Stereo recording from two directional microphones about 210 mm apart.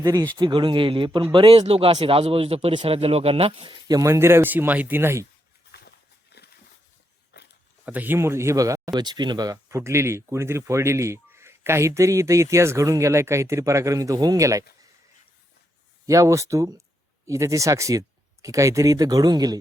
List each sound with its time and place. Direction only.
0.0 s speech: 15° right (ahead or behind)
5.7 s a sound: 50° left (ahead or behind)
7.3 s walk: 50° left (ahead or behind)
7.9 s speech: 10° right (ahead or behind)
16.0 s speech: 15° right (ahead or behind)